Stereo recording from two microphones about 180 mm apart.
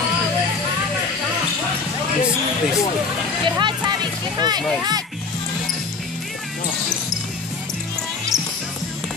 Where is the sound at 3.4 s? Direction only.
25° right (ahead or behind).